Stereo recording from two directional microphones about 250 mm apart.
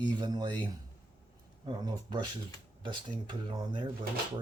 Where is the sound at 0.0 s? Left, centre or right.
Centre.